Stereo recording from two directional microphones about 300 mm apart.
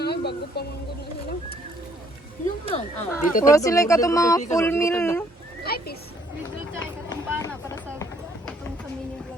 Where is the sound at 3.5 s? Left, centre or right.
Centre.